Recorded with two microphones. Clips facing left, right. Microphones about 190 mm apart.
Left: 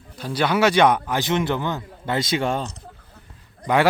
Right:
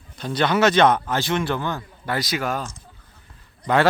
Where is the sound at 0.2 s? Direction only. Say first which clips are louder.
Even; 10° left (ahead or behind); by 2.6 s 30° left (ahead or behind).